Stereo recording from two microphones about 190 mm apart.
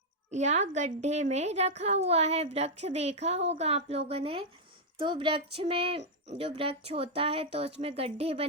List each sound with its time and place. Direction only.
0.3 s a woman's voice: 35° right (ahead or behind)